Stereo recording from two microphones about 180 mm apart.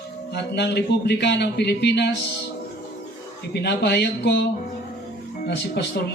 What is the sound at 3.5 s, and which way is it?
Speech, 65° left (ahead or behind).